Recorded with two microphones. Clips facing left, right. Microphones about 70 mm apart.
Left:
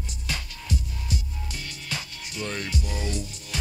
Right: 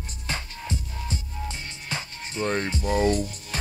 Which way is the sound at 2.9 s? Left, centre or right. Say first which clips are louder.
Right 10 dB; right.